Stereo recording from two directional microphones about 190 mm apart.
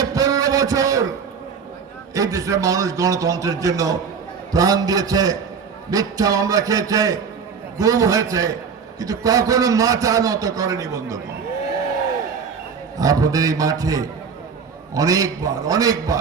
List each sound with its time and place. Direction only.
0.0 s a sound: 20° right (ahead or behind)
2.1 s a man's voice: 15° right (ahead or behind)
13.0 s a man's voice: 20° right (ahead or behind)